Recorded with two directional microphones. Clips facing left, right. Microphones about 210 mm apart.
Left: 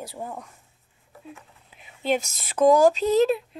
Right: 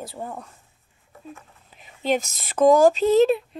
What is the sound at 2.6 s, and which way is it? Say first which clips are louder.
Speech: right 2 dB; centre (ahead or behind).